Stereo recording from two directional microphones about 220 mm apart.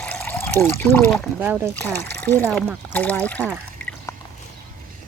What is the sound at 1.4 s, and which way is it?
Speech, 10° right (ahead or behind).